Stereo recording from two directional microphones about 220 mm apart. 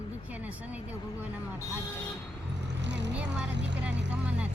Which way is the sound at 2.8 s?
50° right (ahead or behind).